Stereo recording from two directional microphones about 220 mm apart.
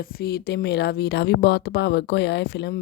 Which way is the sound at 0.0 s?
45° left (ahead or behind).